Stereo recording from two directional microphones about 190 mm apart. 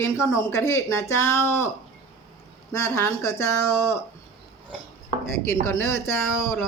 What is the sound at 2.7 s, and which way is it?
Speech, 15° left (ahead or behind).